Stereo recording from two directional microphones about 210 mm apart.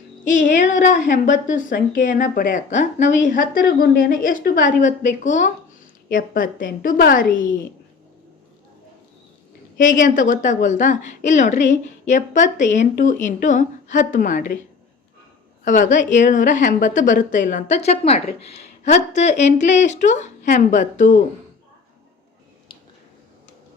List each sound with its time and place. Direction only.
0.3 s a woman's voice: 35° left (ahead or behind)
9.7 s a woman's voice: 40° left (ahead or behind)
15.6 s a woman's voice: 35° left (ahead or behind)